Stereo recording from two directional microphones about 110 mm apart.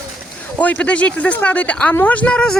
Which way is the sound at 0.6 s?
10° left (ahead or behind).